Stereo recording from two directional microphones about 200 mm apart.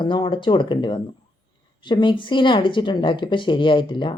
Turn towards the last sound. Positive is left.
turn(degrees=25)  # may be behind; listen again after turning